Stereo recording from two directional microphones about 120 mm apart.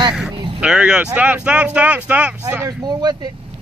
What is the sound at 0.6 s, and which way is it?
Speech, 5° right (ahead or behind).